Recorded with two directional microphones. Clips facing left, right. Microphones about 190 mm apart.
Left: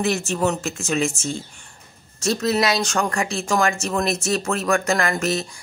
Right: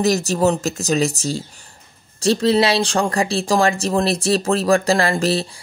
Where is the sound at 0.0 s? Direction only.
40° right (ahead or behind).